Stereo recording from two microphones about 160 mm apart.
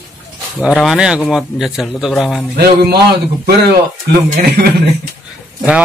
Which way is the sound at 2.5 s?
80° right.